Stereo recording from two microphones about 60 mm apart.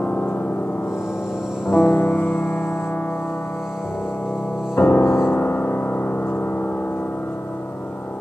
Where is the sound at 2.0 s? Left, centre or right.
Left.